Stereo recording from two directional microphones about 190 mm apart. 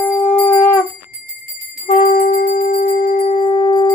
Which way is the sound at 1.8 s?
40° left (ahead or behind).